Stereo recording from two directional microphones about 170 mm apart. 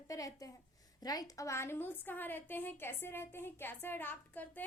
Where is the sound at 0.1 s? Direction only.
20° left (ahead or behind).